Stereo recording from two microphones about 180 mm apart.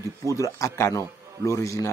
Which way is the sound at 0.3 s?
15° left (ahead or behind).